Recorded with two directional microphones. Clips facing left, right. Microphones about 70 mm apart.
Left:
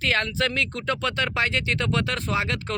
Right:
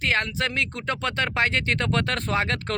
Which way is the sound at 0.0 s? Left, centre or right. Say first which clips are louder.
Left 1 dB; right.